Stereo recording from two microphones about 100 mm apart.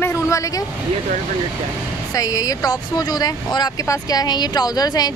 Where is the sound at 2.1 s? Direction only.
35° left (ahead or behind).